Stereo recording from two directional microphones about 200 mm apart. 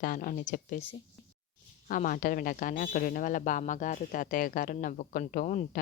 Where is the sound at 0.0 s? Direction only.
45° left (ahead or behind).